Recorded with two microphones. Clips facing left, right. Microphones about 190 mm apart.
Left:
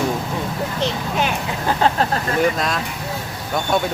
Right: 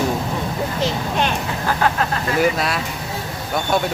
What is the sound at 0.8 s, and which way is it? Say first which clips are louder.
Speech: even; 5° left (ahead or behind).